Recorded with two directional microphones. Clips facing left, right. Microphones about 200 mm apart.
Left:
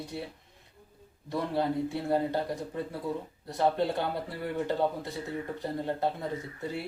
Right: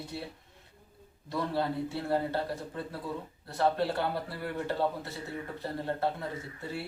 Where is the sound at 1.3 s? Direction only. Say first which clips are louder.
Left 2 dB; 15° left (ahead or behind).